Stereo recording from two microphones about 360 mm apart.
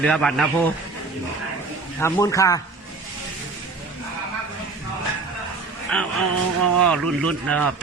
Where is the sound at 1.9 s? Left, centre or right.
Centre.